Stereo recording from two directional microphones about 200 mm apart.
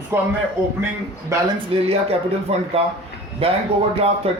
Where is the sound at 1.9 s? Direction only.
30° right (ahead or behind).